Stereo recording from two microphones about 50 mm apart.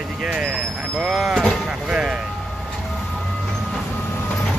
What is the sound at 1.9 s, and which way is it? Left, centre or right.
Music, centre.